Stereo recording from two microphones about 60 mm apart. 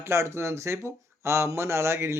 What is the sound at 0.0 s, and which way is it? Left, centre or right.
Speech, right.